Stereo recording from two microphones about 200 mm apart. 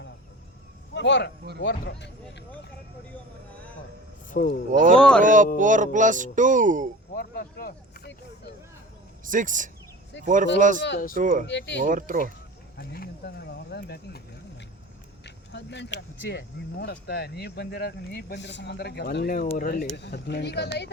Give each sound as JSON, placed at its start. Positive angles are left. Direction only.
{"t": 0.9, "sound": "speech", "side_deg": 60}
{"t": 4.3, "sound": "speech", "side_deg": 45}
{"t": 4.7, "sound": "speech", "side_deg": -40}
{"t": 4.9, "sound": "speech", "side_deg": 5}
{"t": 5.2, "sound": "speech", "side_deg": -40}
{"t": 7.2, "sound": "speech", "side_deg": 50}
{"t": 9.2, "sound": "speech", "side_deg": -40}
{"t": 10.8, "sound": "speech", "side_deg": 60}
{"t": 11.1, "sound": "speech", "side_deg": -40}
{"t": 11.4, "sound": "speech", "side_deg": 60}
{"t": 11.8, "sound": "speech", "side_deg": -40}
{"t": 12.7, "sound": "a sound", "side_deg": 50}
{"t": 15.5, "sound": "speech", "side_deg": 60}